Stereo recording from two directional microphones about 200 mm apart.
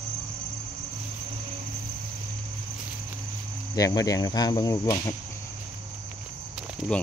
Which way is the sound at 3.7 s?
20° left (ahead or behind).